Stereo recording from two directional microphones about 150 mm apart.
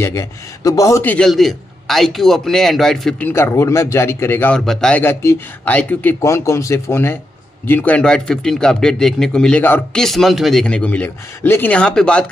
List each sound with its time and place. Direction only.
0.0 s speech: 20° left (ahead or behind)
1.0 s speech: 5° left (ahead or behind)
3.3 s speech: 15° left (ahead or behind)
4.6 s speech: 5° left (ahead or behind)